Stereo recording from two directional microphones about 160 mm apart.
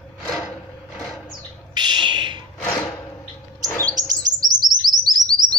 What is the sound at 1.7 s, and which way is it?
Bird, 30° right (ahead or behind).